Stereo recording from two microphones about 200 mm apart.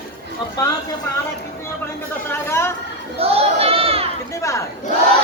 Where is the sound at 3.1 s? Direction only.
30° right (ahead or behind).